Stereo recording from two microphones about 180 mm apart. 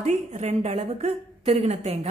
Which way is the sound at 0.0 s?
40° right (ahead or behind).